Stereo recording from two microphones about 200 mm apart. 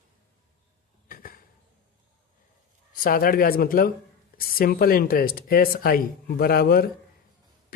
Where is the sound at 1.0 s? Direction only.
45° left (ahead or behind).